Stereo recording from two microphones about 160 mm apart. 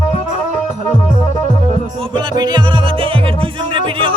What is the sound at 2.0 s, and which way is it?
Music, 30° right (ahead or behind).